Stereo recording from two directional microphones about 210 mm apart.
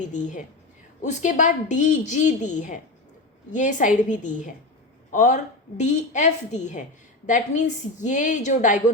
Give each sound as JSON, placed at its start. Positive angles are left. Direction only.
{"t": 0.2, "sound": "a woman's voice", "side_deg": 35}